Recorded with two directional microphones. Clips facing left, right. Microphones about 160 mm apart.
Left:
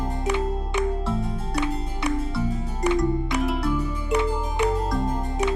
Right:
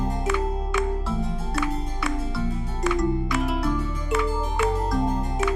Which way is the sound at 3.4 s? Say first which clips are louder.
Left 1 dB; centre (ahead or behind).